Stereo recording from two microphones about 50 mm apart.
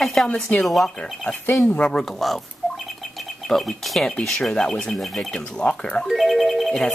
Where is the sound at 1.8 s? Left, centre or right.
Centre.